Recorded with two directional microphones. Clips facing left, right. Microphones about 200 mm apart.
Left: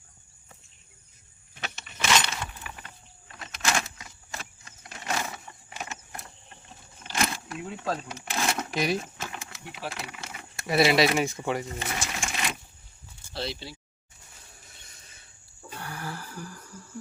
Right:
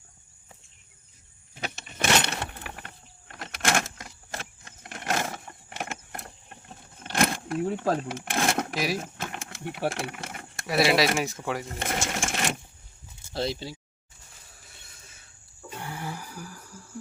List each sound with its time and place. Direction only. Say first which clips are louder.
2.0 s keys jangling: right 2 dB; 60° right (ahead or behind)
7.0 s a sound: right 4 dB; 55° right (ahead or behind)
7.9 s speech: right 5 dB; 55° right (ahead or behind)
8.7 s speech: left 2 dB; 5° right (ahead or behind)
9.0 s speech: right 1 dB; 55° right (ahead or behind)
10.7 s speech: left 1 dB; centre (ahead or behind)
11.9 s speech: right 4 dB; 50° right (ahead or behind)
15.8 s a sound: right 1 dB; 20° right (ahead or behind)